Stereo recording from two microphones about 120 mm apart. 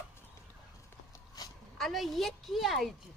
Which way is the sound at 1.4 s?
30° left (ahead or behind).